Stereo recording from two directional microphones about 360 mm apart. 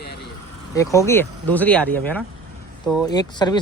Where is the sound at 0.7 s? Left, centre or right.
Centre.